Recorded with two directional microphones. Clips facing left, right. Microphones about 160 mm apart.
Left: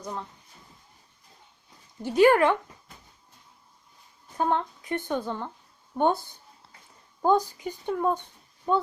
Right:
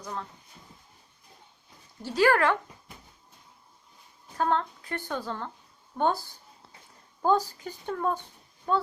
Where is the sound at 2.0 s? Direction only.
20° left (ahead or behind).